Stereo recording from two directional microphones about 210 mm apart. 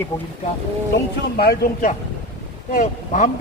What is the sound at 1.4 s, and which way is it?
Speech, 45° left (ahead or behind).